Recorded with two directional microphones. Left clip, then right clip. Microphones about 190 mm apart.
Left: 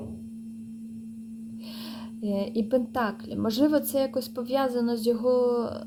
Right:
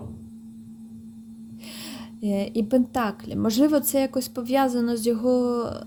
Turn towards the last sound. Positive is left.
turn(degrees=-45)  # may be behind; listen again after turning